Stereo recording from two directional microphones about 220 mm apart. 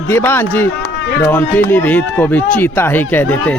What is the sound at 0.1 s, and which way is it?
Speech, 10° left (ahead or behind).